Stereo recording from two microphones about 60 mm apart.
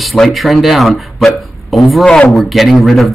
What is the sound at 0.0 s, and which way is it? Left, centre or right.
Speech, centre.